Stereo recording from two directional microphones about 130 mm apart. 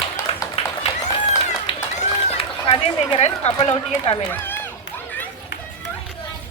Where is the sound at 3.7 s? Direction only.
50° left (ahead or behind).